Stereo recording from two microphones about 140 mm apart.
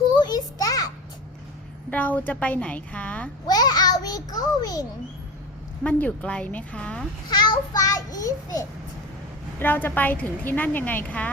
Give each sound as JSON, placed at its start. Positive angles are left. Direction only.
{"t": 0.2, "sound": "a sound", "side_deg": 30}
{"t": 1.9, "sound": "a woman's voice", "side_deg": 10}
{"t": 3.4, "sound": "a child's voice", "side_deg": 30}
{"t": 5.8, "sound": "a woman's voice", "side_deg": 10}
{"t": 7.3, "sound": "a child's voice", "side_deg": 30}
{"t": 9.6, "sound": "a woman's voice", "side_deg": 15}